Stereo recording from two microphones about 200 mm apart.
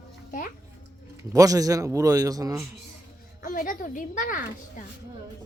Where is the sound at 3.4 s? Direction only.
40° left (ahead or behind).